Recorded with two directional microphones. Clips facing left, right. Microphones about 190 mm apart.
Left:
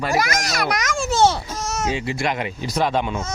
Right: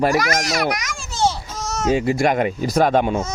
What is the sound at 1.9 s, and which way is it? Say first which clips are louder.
Speech: right 6 dB; 45° right (ahead or behind).